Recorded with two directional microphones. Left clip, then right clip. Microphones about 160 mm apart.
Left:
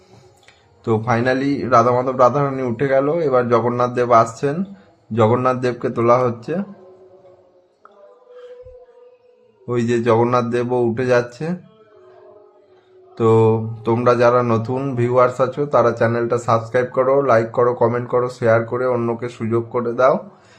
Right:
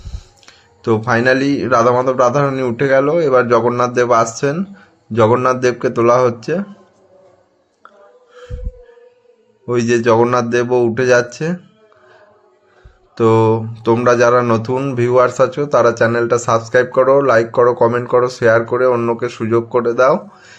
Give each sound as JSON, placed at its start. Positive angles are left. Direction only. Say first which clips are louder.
{"t": 0.9, "sound": "speech", "louder": "right 5 dB", "side_deg": -15}
{"t": 9.6, "sound": "speech", "louder": "right 4 dB", "side_deg": -15}
{"t": 13.1, "sound": "speech", "louder": "right 2 dB", "side_deg": -15}